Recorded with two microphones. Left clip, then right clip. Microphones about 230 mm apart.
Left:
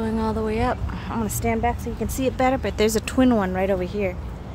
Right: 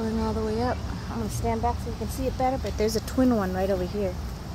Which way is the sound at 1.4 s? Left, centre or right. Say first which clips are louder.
Left 3 dB; left.